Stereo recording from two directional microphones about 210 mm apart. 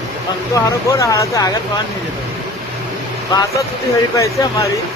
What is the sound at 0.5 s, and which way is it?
Speech, 15° left (ahead or behind).